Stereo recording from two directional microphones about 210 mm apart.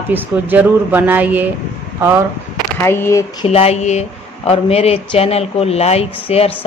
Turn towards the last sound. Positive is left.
turn(degrees=30)  # may be behind; listen again after turning